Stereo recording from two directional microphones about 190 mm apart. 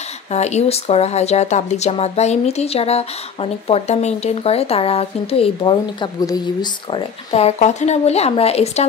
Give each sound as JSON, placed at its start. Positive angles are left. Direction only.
{"t": 0.3, "sound": "speech", "side_deg": 35}